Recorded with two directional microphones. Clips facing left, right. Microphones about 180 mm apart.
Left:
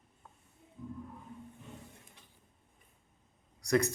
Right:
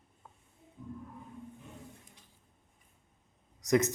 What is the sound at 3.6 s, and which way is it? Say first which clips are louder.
Speech: right 2 dB; 20° right (ahead or behind).